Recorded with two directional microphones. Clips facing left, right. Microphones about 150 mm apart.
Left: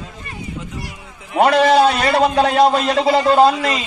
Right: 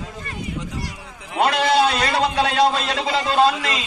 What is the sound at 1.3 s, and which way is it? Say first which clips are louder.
A man's voice: left 5 dB; 40° left (ahead or behind).